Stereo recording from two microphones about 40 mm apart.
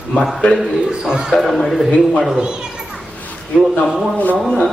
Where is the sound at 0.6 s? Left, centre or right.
Centre.